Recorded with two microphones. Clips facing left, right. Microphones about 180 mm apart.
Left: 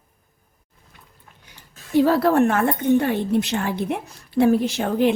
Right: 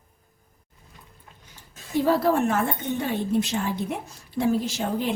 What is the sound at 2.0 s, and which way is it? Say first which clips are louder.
A woman's voice: left 3 dB; 70° left (ahead or behind).